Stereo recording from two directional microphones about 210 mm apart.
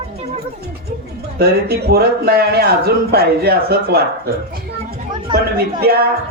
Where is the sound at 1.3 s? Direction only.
50° right (ahead or behind).